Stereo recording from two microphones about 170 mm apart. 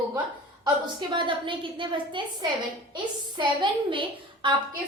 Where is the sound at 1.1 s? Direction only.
30° right (ahead or behind).